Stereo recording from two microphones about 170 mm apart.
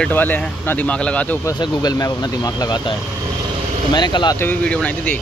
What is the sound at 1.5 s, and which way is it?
Speech, 25° left (ahead or behind).